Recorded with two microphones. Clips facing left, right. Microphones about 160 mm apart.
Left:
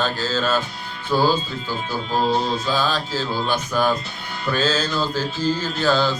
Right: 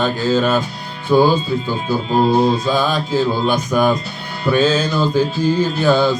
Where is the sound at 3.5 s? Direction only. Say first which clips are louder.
Right 5 dB; 15° right (ahead or behind).